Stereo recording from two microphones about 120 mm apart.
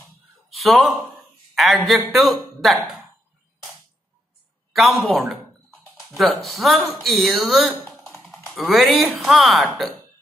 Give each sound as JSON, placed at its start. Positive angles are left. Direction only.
{"t": 0.5, "sound": "speech", "side_deg": 0}
{"t": 1.5, "sound": "a sound", "side_deg": 0}
{"t": 1.9, "sound": "speech", "side_deg": 0}
{"t": 4.7, "sound": "speech", "side_deg": 0}